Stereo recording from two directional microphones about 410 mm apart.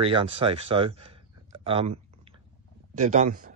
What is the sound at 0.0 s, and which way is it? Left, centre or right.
Speech, centre.